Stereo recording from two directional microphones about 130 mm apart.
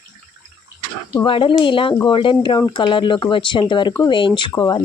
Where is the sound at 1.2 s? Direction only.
40° left (ahead or behind).